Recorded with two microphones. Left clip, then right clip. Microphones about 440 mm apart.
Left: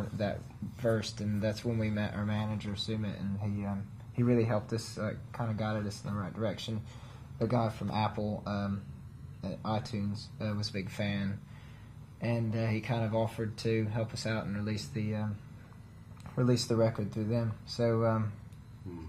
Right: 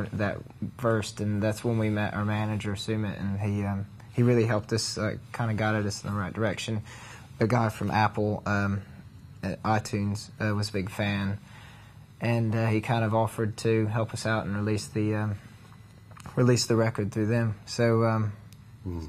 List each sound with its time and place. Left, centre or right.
0.8 s speech: right
16.3 s speech: right